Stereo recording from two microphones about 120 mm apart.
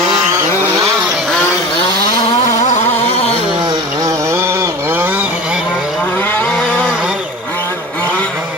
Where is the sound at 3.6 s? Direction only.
25° right (ahead or behind).